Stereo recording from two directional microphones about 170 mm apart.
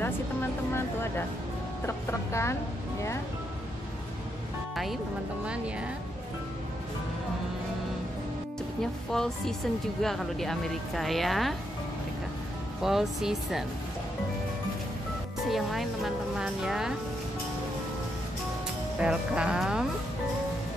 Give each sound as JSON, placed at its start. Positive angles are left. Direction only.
{"t": 0.0, "sound": "vehicle", "side_deg": 15}
{"t": 1.9, "sound": "speech", "side_deg": 15}
{"t": 9.1, "sound": "speech", "side_deg": 0}
{"t": 12.8, "sound": "speech", "side_deg": 0}
{"t": 15.5, "sound": "speech", "side_deg": 0}
{"t": 18.9, "sound": "speech", "side_deg": -5}